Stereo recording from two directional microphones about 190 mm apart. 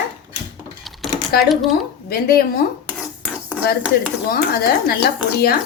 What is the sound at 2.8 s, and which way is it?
Cutlery, 5° right (ahead or behind).